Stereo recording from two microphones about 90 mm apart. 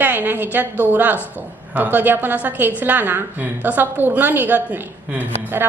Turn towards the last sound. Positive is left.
turn(degrees=-20)  # may be behind; listen again after turning